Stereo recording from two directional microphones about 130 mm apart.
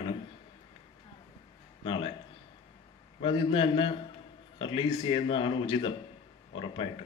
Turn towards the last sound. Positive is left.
turn(degrees=40)  # may be behind; listen again after turning